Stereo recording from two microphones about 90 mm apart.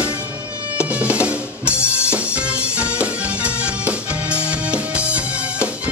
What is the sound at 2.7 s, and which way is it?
Music, 15° right (ahead or behind).